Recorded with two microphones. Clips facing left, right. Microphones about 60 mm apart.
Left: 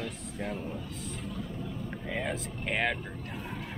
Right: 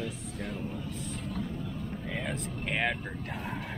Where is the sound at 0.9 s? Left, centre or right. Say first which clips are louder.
Right 2 dB; centre.